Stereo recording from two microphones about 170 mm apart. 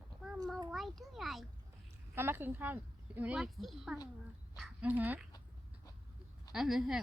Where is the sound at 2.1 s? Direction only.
15° right (ahead or behind).